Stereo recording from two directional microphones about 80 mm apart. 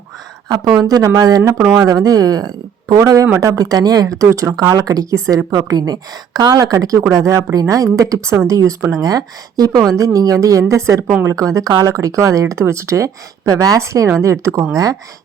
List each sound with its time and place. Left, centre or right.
0.4 s speech: right
1.7 s speech: right
5.5 s speech: right
9.0 s speech: right